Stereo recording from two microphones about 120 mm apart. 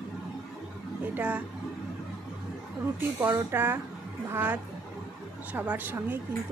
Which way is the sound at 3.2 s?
20° right (ahead or behind).